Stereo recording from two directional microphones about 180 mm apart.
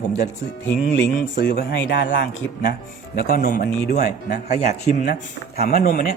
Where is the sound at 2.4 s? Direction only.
65° left (ahead or behind).